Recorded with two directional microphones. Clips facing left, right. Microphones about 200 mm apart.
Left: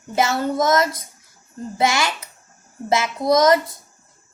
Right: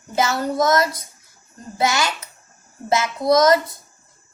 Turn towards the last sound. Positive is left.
turn(degrees=25)  # may be behind; listen again after turning